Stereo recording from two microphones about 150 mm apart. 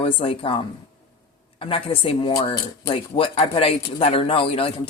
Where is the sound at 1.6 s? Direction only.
40° left (ahead or behind).